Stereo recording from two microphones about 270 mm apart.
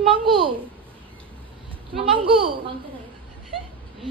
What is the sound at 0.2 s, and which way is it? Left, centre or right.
Speech, centre.